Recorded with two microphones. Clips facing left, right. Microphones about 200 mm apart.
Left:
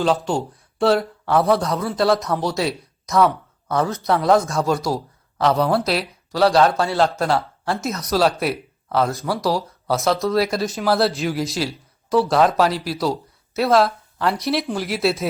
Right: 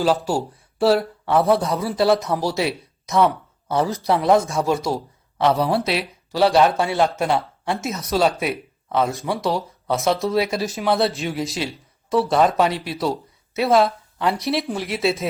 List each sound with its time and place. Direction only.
0.0 s speech: 5° right (ahead or behind)
3.7 s speech: 30° right (ahead or behind)
4.0 s speech: centre (ahead or behind)
6.7 s speech: 20° right (ahead or behind)
7.7 s speech: centre (ahead or behind)